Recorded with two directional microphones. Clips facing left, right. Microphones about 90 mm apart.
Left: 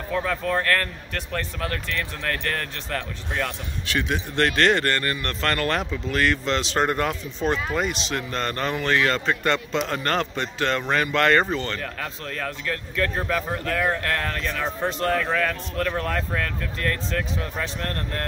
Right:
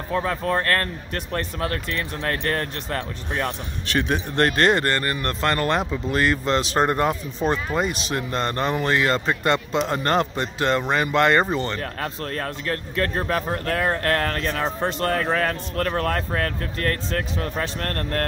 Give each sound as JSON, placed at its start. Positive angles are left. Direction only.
{"t": 0.1, "sound": "speech", "side_deg": -30}
{"t": 4.1, "sound": "speech", "side_deg": -40}
{"t": 6.4, "sound": "speech", "side_deg": -40}
{"t": 6.8, "sound": "speech", "side_deg": -25}
{"t": 9.2, "sound": "speech", "side_deg": -15}
{"t": 9.8, "sound": "speech", "side_deg": -25}
{"t": 10.8, "sound": "speech", "side_deg": -15}
{"t": 11.8, "sound": "speech", "side_deg": -45}